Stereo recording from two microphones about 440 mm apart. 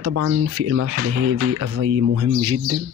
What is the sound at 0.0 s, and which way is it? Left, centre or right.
Speech, right.